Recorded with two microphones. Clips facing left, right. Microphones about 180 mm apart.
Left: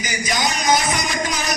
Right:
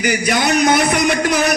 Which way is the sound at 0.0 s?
65° right (ahead or behind).